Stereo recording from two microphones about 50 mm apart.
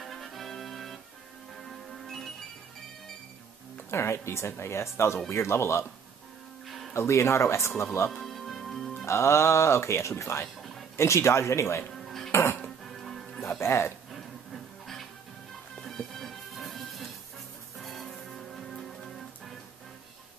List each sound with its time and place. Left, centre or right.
0.0 s music: centre
3.9 s speech: left
6.9 s speech: left
8.1 s music: centre
9.0 s speech: left
12.0 s cutlery: centre
12.3 s dishes: left
12.8 s music: centre
13.5 s speech: left
15.8 s music: centre